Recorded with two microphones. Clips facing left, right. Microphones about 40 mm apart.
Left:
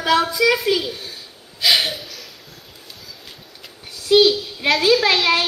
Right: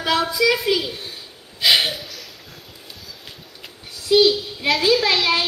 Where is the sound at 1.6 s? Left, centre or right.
Centre.